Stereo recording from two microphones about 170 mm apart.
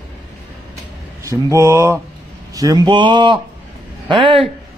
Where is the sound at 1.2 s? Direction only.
20° right (ahead or behind).